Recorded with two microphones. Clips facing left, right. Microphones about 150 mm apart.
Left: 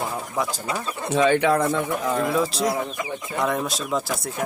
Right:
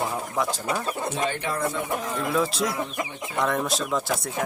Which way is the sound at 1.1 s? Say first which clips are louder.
Left 14 dB; 90° left.